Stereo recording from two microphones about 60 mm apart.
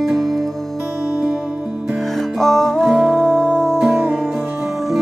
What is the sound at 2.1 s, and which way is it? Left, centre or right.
Music, centre.